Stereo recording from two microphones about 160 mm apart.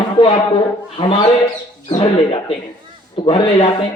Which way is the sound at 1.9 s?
30° left (ahead or behind).